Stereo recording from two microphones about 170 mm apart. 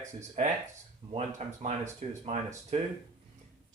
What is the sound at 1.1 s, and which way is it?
Speech, 45° right (ahead or behind).